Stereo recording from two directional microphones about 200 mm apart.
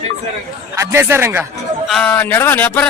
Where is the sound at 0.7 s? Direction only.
10° right (ahead or behind).